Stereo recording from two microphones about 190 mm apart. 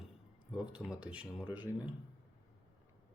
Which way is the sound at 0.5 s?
5° right (ahead or behind).